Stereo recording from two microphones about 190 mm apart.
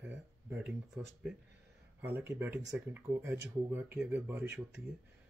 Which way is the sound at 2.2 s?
10° right (ahead or behind).